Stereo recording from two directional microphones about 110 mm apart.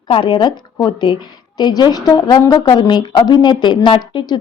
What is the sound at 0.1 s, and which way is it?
A woman's voice, 45° left (ahead or behind).